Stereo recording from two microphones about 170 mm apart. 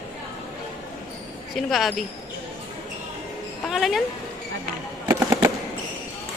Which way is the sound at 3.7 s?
Centre (ahead or behind).